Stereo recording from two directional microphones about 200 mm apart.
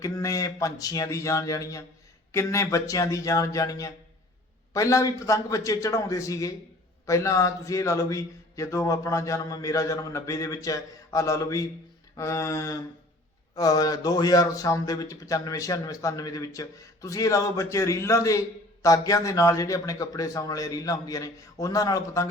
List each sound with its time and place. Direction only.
0.0 s speech: 15° left (ahead or behind)